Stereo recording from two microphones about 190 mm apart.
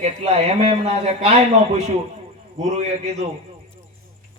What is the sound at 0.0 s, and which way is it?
A man's voice, 35° right (ahead or behind).